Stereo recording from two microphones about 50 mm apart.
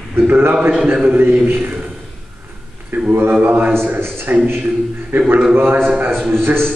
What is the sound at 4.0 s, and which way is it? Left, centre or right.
A man's voice, right.